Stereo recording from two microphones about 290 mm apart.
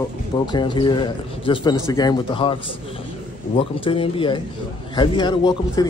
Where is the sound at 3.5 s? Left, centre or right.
Centre.